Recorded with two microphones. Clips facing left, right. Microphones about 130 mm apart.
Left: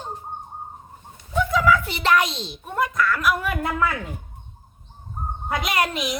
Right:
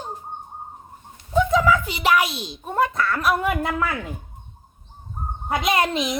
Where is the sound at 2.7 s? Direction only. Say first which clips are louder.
Right 1 dB; 30° right (ahead or behind).